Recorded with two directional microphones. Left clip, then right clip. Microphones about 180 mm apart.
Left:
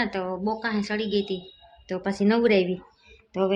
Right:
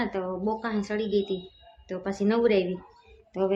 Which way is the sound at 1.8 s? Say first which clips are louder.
Left 3 dB; 25° left (ahead or behind).